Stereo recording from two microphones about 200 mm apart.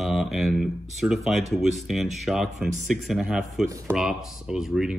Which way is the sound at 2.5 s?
35° right (ahead or behind).